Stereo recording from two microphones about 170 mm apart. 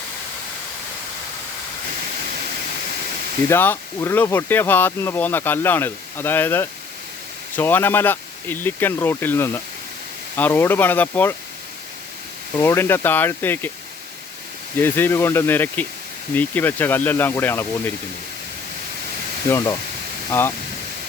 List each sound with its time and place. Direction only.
3.5 s speech: 15° left (ahead or behind)
12.5 s speech: 15° left (ahead or behind)
14.8 s speech: 10° left (ahead or behind)
19.5 s speech: 15° left (ahead or behind)